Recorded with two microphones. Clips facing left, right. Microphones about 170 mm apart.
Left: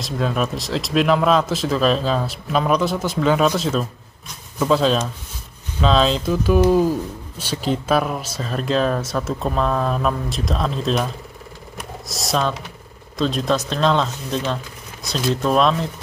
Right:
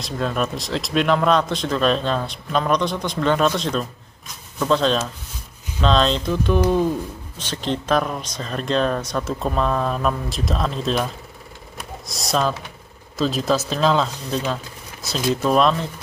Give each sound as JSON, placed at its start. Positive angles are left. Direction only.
{"t": 0.0, "sound": "speech", "side_deg": 0}
{"t": 12.1, "sound": "speech", "side_deg": 0}